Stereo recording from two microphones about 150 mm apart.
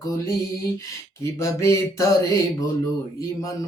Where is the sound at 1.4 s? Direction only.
20° left (ahead or behind).